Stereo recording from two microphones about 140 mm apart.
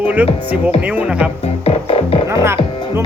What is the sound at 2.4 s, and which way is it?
Music, 20° right (ahead or behind).